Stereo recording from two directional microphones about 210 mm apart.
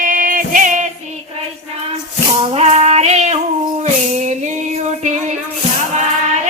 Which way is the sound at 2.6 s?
30° right (ahead or behind).